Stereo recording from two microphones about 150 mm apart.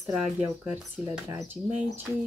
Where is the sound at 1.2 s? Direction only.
20° right (ahead or behind).